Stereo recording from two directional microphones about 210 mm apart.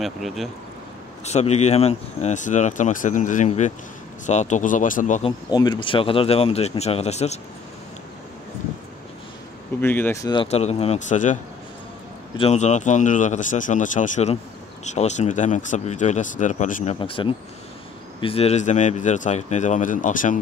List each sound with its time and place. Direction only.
0.0 s speech: centre (ahead or behind)
1.2 s speech: 30° left (ahead or behind)
5.5 s speech: 20° left (ahead or behind)
9.8 s speech: 10° left (ahead or behind); by 11.3 s 35° left (ahead or behind)
12.4 s speech: 30° left (ahead or behind)
17.0 s speech: 25° left (ahead or behind)